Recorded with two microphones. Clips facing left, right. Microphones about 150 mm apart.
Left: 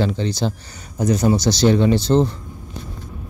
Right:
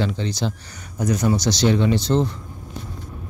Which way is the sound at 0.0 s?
35° left (ahead or behind).